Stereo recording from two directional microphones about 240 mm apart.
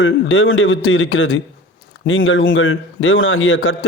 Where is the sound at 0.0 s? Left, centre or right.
Left.